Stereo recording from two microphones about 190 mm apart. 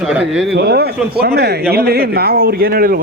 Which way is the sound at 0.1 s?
5° right (ahead or behind).